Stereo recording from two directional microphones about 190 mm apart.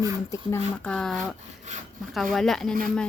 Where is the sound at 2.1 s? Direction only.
Centre (ahead or behind).